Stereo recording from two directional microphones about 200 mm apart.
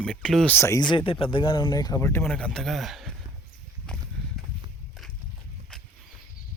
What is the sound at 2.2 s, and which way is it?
Speech, 5° left (ahead or behind).